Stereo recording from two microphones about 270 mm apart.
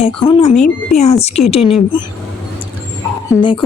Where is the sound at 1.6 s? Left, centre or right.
Centre.